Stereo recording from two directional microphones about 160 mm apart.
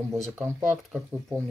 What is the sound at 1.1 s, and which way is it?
Speech, 15° right (ahead or behind).